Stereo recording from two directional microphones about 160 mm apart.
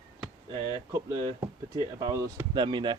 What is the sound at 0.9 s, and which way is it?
Speech, 20° right (ahead or behind).